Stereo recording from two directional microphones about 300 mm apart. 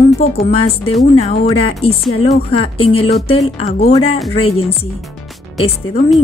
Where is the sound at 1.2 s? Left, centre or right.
Centre.